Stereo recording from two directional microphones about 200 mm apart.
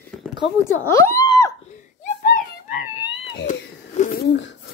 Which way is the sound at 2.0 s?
45° left (ahead or behind).